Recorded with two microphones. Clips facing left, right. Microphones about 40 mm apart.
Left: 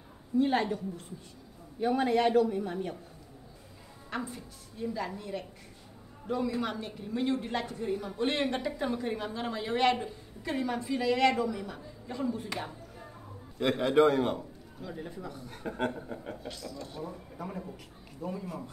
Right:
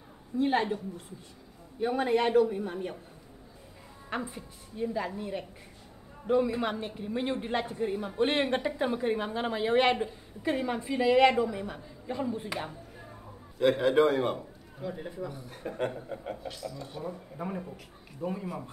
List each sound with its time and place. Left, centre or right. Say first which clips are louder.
0.4 s speech: even; right
1.8 s speech: even; centre
4.1 s a man's voice: right 2 dB; right
14.8 s speech: right 4 dB; centre